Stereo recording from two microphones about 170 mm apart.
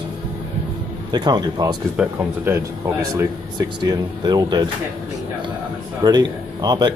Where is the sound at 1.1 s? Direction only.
25° right (ahead or behind).